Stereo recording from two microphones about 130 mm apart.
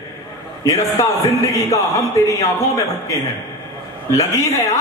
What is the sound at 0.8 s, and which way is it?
Speech, 25° left (ahead or behind).